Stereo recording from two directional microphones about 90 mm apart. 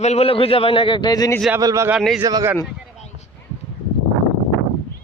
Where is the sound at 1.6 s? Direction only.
40° right (ahead or behind).